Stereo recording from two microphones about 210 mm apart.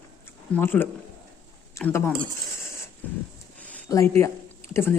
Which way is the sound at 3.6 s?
10° left (ahead or behind).